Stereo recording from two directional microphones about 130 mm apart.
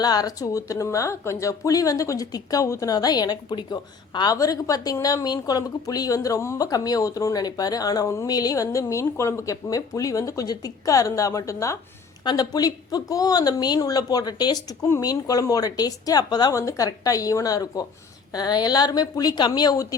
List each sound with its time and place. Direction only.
0.0 s a woman's voice: 30° left (ahead or behind)